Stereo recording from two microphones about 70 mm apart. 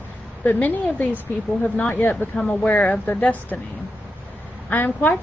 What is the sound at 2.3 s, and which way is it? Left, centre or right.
A woman's voice, centre.